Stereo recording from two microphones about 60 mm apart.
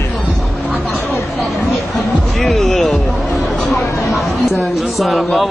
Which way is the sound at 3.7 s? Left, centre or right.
Centre.